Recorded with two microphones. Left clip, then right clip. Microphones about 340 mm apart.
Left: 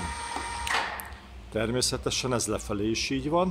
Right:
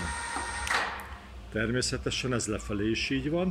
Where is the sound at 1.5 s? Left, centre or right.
Left.